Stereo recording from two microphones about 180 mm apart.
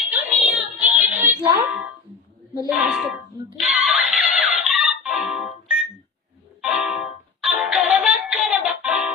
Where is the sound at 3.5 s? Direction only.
Centre (ahead or behind).